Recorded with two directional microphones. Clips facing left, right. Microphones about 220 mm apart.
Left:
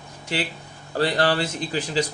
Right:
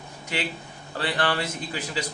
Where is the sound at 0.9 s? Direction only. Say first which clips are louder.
Left 5 dB; 40° left (ahead or behind).